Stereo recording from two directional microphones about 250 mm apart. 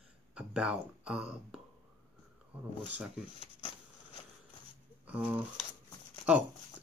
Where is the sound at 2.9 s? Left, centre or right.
Centre.